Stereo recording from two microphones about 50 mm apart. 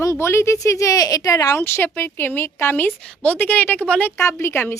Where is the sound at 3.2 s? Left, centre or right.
Left.